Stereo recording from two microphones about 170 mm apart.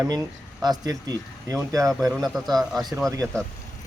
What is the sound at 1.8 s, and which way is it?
Speech, centre (ahead or behind).